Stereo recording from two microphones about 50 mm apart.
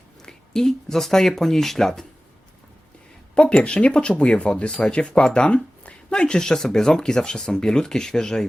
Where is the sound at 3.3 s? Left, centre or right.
Centre.